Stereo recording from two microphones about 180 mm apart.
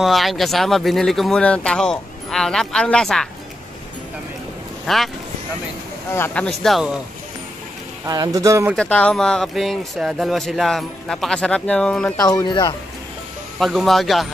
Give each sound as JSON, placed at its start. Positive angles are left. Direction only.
{"t": 0.0, "sound": "speech", "side_deg": 0}
{"t": 4.8, "sound": "speech", "side_deg": 0}
{"t": 6.1, "sound": "speech", "side_deg": 10}
{"t": 8.0, "sound": "speech", "side_deg": -20}
{"t": 8.7, "sound": "speech", "side_deg": 5}
{"t": 12.2, "sound": "speech", "side_deg": 20}
{"t": 13.6, "sound": "speech", "side_deg": 0}